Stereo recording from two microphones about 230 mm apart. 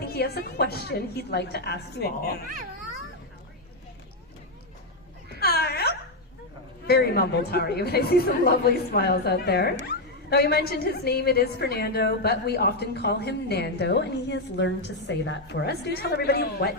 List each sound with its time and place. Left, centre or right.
0.0 s a woman's voice: left
5.4 s a sound: left
6.8 s a woman's voice: left